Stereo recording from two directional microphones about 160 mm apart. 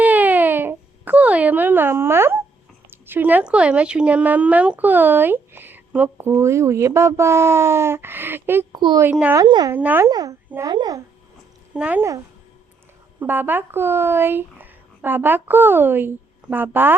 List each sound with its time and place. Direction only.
0.0 s baby cry: 10° right (ahead or behind)
3.1 s speech: 10° right (ahead or behind)
8.7 s a child's voice: 25° right (ahead or behind)
9.0 s speech: 10° right (ahead or behind)
9.4 s a child's voice: 25° right (ahead or behind)
9.7 s speech: 10° right (ahead or behind)
10.1 s a child's voice: 25° right (ahead or behind)
11.7 s speech: 10° right (ahead or behind)